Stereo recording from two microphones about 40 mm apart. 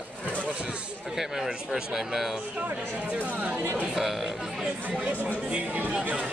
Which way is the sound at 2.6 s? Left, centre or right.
Right.